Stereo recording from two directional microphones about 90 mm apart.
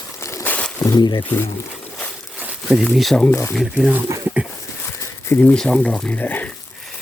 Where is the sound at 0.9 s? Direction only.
50° left (ahead or behind).